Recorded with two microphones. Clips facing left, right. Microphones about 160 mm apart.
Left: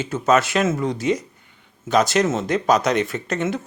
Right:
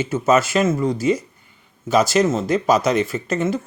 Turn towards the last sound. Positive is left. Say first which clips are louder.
# right 2 dB
turn(degrees=0)  # may be behind; listen again after turning